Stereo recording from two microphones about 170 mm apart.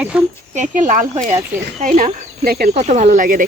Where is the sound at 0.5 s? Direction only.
45° right (ahead or behind).